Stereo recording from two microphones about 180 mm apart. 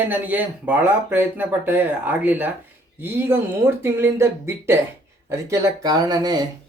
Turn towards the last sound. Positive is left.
turn(degrees=-20)  # may be behind; listen again after turning